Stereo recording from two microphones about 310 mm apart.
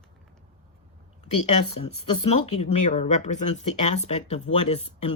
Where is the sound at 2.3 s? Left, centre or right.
Centre.